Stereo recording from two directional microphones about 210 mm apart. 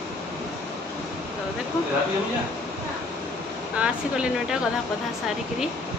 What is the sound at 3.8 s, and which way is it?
Speech, 5° right (ahead or behind).